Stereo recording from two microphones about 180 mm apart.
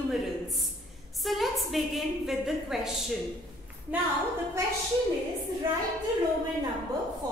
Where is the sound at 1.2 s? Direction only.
Centre (ahead or behind).